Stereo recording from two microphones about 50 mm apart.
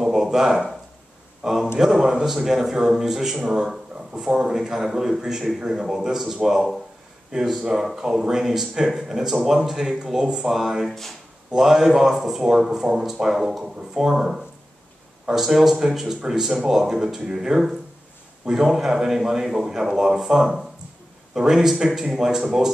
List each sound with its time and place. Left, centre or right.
0.0 s a sound: centre
1.4 s a man's voice: centre
10.9 s speech: centre
11.5 s speech: centre